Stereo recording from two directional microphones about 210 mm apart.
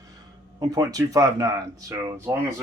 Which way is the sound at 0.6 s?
15° right (ahead or behind).